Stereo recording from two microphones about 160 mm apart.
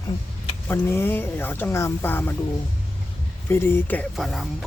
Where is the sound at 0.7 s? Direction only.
15° left (ahead or behind).